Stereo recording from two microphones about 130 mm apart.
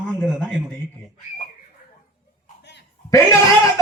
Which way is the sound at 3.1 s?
25° left (ahead or behind).